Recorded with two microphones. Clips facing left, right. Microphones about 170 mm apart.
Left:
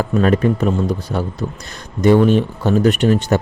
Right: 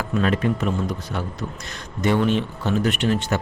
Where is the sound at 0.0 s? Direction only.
45° left (ahead or behind).